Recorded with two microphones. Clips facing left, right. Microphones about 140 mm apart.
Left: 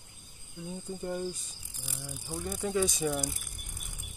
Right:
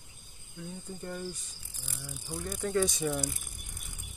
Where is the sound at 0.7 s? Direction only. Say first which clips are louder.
Left 5 dB; 15° left (ahead or behind).